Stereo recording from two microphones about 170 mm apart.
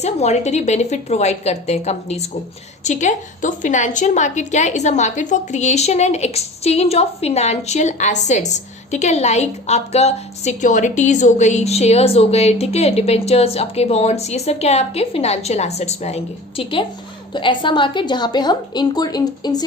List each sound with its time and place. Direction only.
0.0 s a woman's voice: 40° left (ahead or behind); by 19.6 s 25° left (ahead or behind)